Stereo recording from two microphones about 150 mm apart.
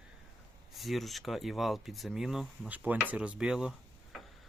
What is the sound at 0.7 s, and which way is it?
Speech, centre (ahead or behind).